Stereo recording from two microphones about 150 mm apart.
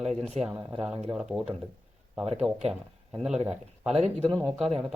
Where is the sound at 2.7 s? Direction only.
5° right (ahead or behind).